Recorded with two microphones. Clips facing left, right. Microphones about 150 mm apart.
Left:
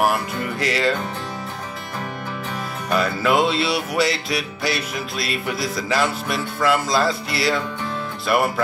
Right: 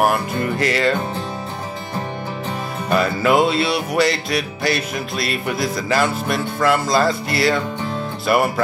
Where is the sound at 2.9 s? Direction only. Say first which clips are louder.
Right 3 dB; centre (ahead or behind).